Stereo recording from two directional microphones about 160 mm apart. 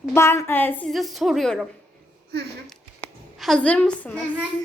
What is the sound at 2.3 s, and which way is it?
Speech, 90° right.